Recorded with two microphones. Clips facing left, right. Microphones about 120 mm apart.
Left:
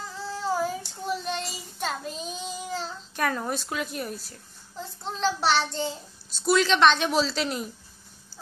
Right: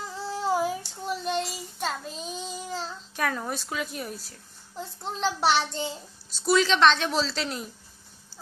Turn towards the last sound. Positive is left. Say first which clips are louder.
# left 3 dB
turn(degrees=5)  # may be behind; listen again after turning